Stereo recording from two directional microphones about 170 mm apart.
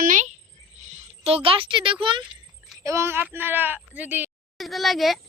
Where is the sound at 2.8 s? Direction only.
15° right (ahead or behind).